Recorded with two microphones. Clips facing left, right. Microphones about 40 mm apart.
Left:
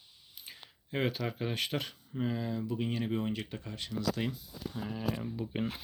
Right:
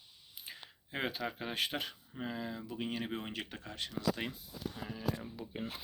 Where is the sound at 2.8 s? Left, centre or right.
Right.